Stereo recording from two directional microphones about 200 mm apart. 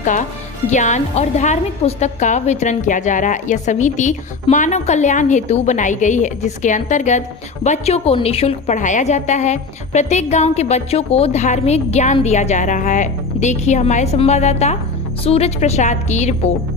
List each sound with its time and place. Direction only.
0.0 s a woman's voice: 40° left (ahead or behind)